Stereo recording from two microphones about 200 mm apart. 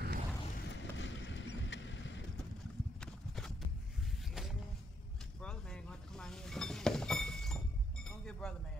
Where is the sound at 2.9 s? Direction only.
Centre (ahead or behind).